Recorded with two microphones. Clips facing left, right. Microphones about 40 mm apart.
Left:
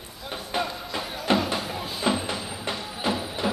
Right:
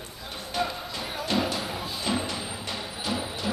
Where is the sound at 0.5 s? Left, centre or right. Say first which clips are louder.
Left 1 dB; left.